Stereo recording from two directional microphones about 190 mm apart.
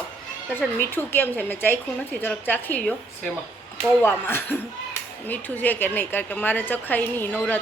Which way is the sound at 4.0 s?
10° left (ahead or behind).